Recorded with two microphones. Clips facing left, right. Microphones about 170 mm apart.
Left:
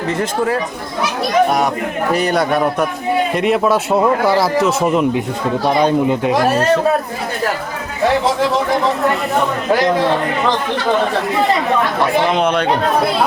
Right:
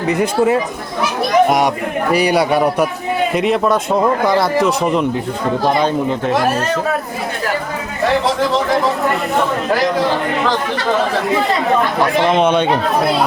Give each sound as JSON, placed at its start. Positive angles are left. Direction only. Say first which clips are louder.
{"t": 0.1, "sound": "speech", "louder": "right 4 dB", "side_deg": -20}
{"t": 2.1, "sound": "speech", "louder": "right 2 dB", "side_deg": -5}
{"t": 8.4, "sound": "speech", "louder": "even", "side_deg": 0}